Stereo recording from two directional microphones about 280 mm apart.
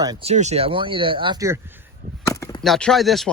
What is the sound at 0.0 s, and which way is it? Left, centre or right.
Speech, centre.